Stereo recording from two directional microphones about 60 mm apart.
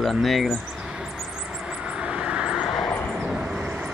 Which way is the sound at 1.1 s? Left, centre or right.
Centre.